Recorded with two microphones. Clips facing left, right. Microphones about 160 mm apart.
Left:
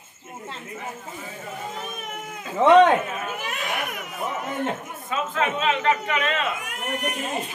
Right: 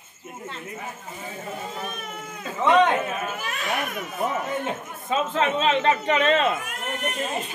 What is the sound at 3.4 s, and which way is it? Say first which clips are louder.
Speech: right 1 dB; 15° left (ahead or behind).